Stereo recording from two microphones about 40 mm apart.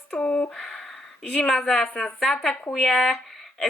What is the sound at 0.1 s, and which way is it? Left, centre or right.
Speech, left.